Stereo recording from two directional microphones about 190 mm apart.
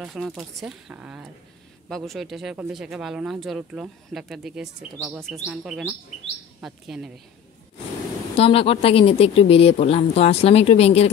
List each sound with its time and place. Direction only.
0.0 s speech: centre (ahead or behind)
8.4 s speech: 30° left (ahead or behind)